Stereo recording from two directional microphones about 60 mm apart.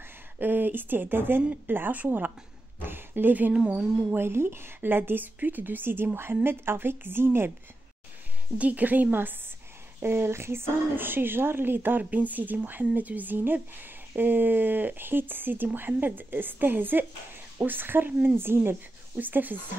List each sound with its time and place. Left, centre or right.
0.4 s a woman's voice: right
2.8 s a sound: right
3.5 s a woman's voice: right
4.2 s speech: right
8.5 s a woman's voice: right